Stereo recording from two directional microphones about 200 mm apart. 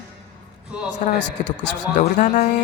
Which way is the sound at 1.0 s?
40° left (ahead or behind).